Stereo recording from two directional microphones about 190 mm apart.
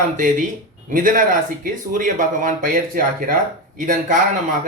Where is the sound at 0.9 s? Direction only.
45° right (ahead or behind).